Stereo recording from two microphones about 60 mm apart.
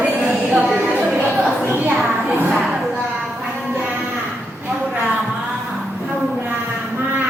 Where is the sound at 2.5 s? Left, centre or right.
Centre.